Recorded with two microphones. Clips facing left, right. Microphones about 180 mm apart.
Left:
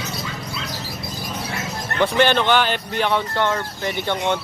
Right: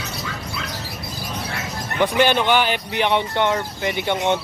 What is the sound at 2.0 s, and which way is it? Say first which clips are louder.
Speech: even; 10° right (ahead or behind).